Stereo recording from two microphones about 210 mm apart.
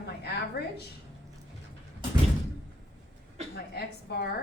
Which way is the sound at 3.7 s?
50° left (ahead or behind).